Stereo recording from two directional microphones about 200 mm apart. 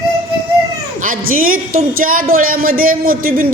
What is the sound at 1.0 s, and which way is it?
A woman's voice, 45° right (ahead or behind).